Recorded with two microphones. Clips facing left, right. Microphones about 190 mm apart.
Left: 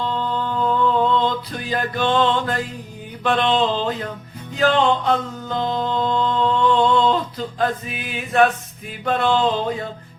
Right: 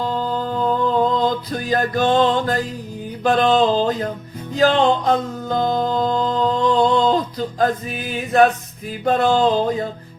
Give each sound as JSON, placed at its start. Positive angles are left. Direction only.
{"t": 0.0, "sound": "music", "side_deg": -40}